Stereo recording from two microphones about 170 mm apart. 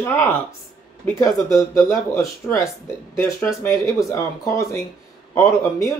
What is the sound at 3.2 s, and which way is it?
Speech, 15° left (ahead or behind).